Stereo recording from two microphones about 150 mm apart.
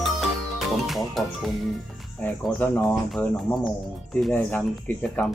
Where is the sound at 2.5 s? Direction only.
10° left (ahead or behind).